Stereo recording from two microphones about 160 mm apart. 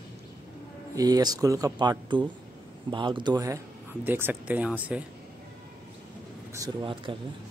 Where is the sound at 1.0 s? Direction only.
25° right (ahead or behind).